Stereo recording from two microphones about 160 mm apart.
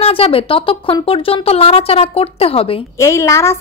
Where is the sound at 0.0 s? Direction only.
35° left (ahead or behind).